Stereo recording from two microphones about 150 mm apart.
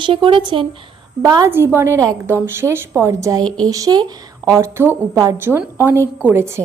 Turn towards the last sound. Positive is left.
turn(degrees=-15)  # may be behind; listen again after turning